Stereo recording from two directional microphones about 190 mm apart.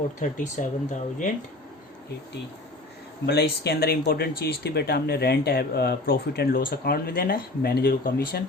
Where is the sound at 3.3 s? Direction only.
60° left (ahead or behind).